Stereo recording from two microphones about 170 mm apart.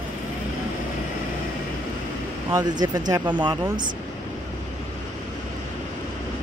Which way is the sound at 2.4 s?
20° right (ahead or behind).